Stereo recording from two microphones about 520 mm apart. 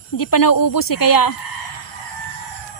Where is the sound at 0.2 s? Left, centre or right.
Left.